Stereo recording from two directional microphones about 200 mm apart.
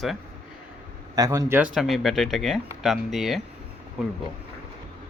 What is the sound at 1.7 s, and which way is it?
Speech, centre (ahead or behind).